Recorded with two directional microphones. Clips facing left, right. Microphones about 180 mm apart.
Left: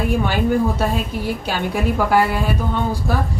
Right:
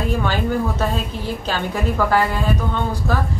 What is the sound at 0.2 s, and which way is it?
A woman's voice, 10° left (ahead or behind).